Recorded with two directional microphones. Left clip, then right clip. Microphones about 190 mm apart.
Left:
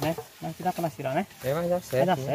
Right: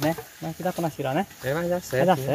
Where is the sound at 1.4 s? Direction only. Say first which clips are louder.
Right 1 dB; centre (ahead or behind).